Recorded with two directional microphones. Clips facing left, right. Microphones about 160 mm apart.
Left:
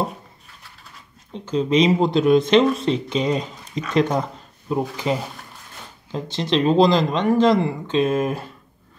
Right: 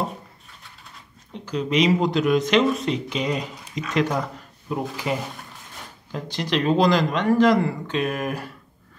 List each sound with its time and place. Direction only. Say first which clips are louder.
1.4 s speech: left 3 dB; 25° left (ahead or behind)